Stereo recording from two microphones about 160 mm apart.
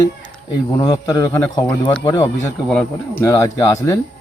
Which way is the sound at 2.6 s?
5° left (ahead or behind).